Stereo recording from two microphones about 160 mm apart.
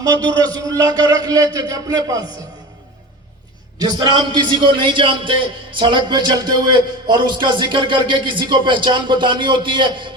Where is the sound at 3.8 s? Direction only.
30° right (ahead or behind).